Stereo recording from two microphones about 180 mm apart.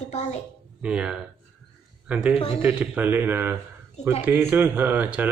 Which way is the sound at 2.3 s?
30° left (ahead or behind).